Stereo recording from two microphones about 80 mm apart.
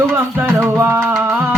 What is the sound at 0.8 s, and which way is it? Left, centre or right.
Music, right.